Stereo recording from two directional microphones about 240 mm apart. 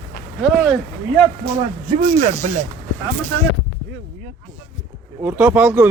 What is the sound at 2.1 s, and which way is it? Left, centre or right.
Speech, right.